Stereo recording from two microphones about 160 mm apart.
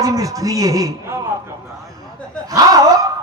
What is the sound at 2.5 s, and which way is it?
Speech, 20° right (ahead or behind).